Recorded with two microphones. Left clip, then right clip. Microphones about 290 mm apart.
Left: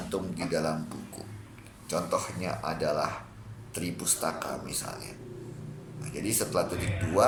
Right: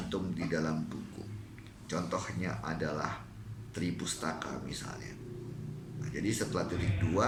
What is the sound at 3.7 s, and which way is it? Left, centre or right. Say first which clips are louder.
A man's voice: left 4 dB; centre.